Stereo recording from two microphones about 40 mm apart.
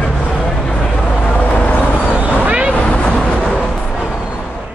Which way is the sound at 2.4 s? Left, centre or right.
Right.